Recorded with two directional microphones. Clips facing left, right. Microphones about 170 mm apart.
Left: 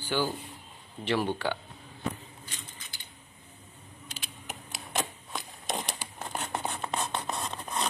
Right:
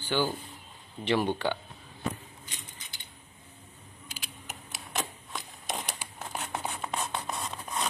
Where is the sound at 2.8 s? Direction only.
20° right (ahead or behind).